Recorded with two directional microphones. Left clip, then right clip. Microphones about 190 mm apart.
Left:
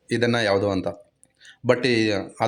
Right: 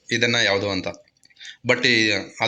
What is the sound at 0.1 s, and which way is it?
Speech, 30° left (ahead or behind).